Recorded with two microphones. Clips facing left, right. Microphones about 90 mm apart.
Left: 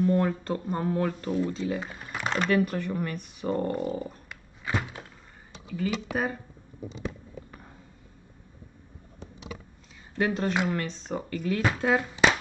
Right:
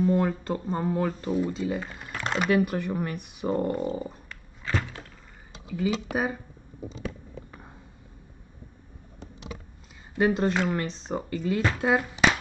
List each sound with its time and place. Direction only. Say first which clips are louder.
0.0 s speech: right 1 dB; 5° right (ahead or behind)
3.9 s a sound: right 1 dB; 5° right (ahead or behind)
4.3 s a sound: even; 15° left (ahead or behind)
5.7 s speech: right 2 dB; 10° right (ahead or behind)
10.1 s speech: right 3 dB; 10° right (ahead or behind)
11.3 s speech: even; 10° right (ahead or behind)